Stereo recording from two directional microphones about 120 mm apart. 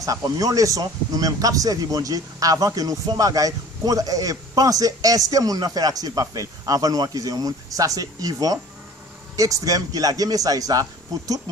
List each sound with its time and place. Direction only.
0.0 s speech: 30° right (ahead or behind)